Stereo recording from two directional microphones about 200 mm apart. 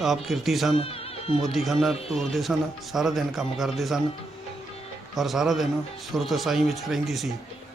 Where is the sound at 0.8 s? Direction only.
30° left (ahead or behind).